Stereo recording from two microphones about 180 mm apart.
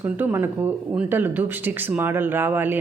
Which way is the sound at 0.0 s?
10° right (ahead or behind).